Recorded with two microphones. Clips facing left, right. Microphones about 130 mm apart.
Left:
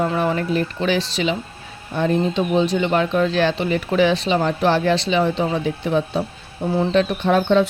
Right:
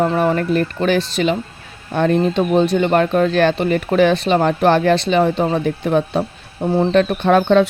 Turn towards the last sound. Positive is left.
turn(degrees=-65)  # may be behind; listen again after turning